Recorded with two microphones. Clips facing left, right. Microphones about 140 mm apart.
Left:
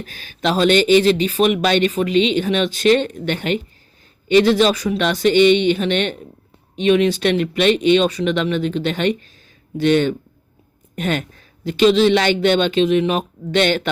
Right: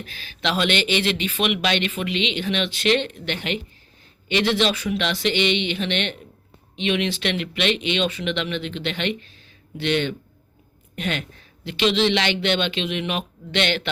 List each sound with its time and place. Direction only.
0.0 s a woman's voice: 45° left (ahead or behind)